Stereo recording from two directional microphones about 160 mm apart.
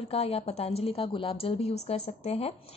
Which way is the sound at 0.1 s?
35° left (ahead or behind).